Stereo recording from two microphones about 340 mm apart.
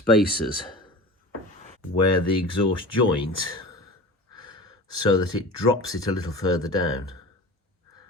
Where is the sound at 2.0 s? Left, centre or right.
Left.